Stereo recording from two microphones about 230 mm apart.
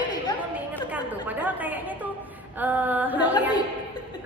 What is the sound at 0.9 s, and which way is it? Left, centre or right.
A woman's voice, centre.